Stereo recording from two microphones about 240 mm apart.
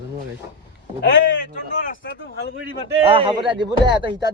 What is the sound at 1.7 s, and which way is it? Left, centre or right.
Speech, left.